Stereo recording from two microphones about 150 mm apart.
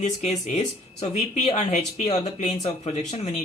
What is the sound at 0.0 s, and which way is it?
Speech, 50° left (ahead or behind).